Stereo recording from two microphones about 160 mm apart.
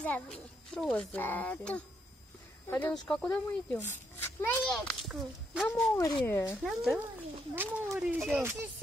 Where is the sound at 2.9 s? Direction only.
5° left (ahead or behind).